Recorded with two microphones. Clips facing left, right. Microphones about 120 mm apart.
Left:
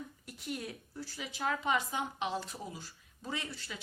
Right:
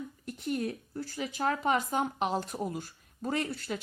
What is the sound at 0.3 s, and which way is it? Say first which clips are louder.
Speech: right 9 dB; 45° right (ahead or behind).